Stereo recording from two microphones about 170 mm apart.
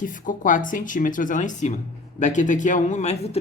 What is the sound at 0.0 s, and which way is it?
Speech, 50° left (ahead or behind).